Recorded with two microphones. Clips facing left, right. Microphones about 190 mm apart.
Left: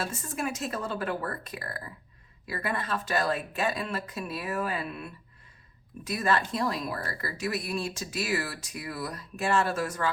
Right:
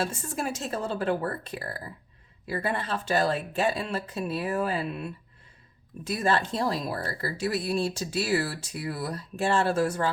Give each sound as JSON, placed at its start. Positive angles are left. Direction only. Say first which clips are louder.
{"t": 0.0, "sound": "speech", "louder": "right 2 dB", "side_deg": -30}